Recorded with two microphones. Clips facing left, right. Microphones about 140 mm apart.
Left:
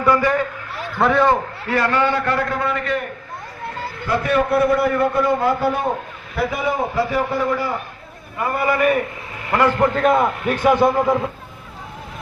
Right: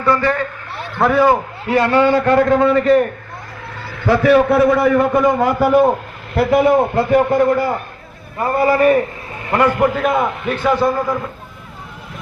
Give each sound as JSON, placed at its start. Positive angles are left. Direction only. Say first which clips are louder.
{"t": 0.0, "sound": "a man's voice", "louder": "right 1 dB", "side_deg": 15}
{"t": 0.9, "sound": "a man's voice", "louder": "right 3 dB", "side_deg": 0}
{"t": 1.6, "sound": "a man's voice", "louder": "right 6 dB", "side_deg": -20}
{"t": 4.0, "sound": "a man's voice", "louder": "right 7 dB", "side_deg": -90}
{"t": 6.3, "sound": "a man's voice", "louder": "right 9 dB", "side_deg": -65}
{"t": 8.4, "sound": "a man's voice", "louder": "right 5 dB", "side_deg": -35}
{"t": 9.5, "sound": "a man's voice", "louder": "right 2 dB", "side_deg": -15}
{"t": 10.5, "sound": "a man's voice", "louder": "left 1 dB", "side_deg": 15}